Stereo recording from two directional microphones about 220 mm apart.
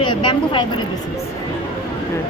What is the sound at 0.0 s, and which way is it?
Speech, 20° left (ahead or behind).